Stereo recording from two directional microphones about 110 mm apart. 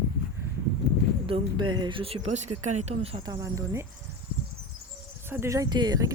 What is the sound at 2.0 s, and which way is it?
Speech, 70° right (ahead or behind).